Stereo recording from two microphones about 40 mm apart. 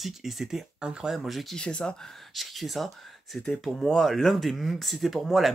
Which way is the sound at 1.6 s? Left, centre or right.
Left.